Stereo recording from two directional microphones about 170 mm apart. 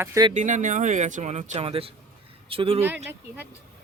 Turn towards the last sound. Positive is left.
turn(degrees=-10)  # may be behind; listen again after turning